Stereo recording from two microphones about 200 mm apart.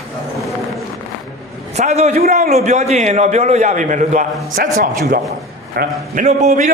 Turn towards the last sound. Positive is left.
turn(degrees=-35)  # may be behind; listen again after turning